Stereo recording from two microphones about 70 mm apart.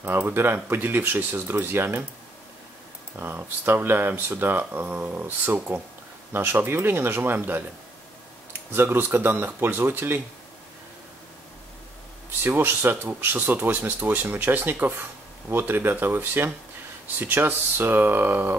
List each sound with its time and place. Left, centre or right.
0.0 s speech: right
3.2 s speech: right
12.4 s speech: right